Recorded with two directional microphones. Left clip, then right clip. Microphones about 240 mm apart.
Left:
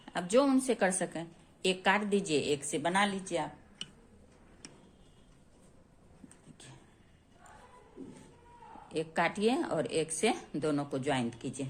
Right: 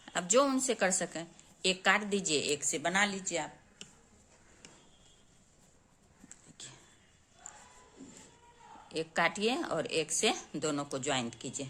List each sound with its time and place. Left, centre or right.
0.0 s a woman's voice: centre
6.2 s a sound: centre
8.9 s a woman's voice: centre